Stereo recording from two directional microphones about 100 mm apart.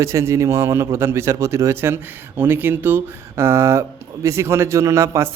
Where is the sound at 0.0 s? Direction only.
30° right (ahead or behind).